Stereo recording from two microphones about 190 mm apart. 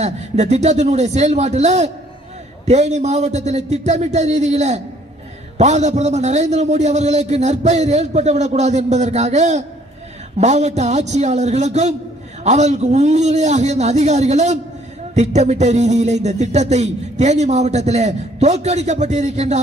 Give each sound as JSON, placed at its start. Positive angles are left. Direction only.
{"t": 0.0, "sound": "a man's voice", "side_deg": -35}